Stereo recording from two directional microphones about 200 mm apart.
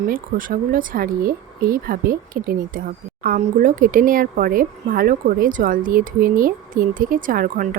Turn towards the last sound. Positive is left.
turn(degrees=-45)  # may be behind; listen again after turning